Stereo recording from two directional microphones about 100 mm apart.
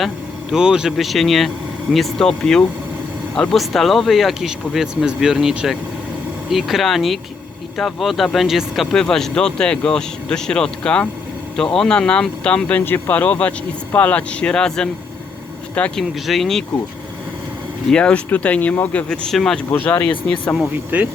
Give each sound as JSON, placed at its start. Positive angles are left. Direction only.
{"t": 0.5, "sound": "speech", "side_deg": -5}
{"t": 16.2, "sound": "speech", "side_deg": 0}
{"t": 17.9, "sound": "speech", "side_deg": 10}
{"t": 19.7, "sound": "speech", "side_deg": 15}
{"t": 20.9, "sound": "speech", "side_deg": -15}